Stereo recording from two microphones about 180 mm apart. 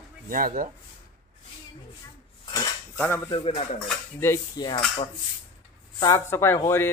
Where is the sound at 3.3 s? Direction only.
25° left (ahead or behind).